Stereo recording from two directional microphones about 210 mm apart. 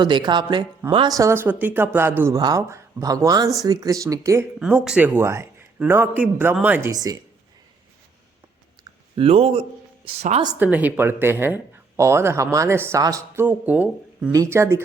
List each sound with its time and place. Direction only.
0.0 s speech: 20° right (ahead or behind)
9.1 s a woman's voice: 30° right (ahead or behind)
10.6 s speech: 10° right (ahead or behind)